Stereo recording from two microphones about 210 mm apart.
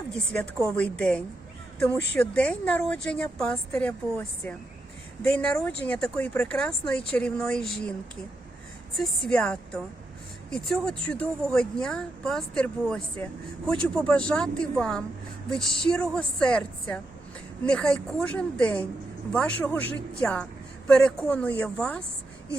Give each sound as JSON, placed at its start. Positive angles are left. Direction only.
{"t": 0.8, "sound": "speech", "side_deg": 5}
{"t": 9.0, "sound": "speech", "side_deg": 5}